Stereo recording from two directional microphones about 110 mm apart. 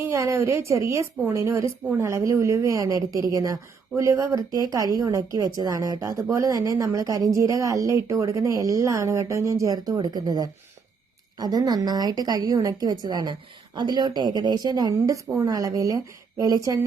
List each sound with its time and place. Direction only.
0.1 s a woman's voice: 25° right (ahead or behind)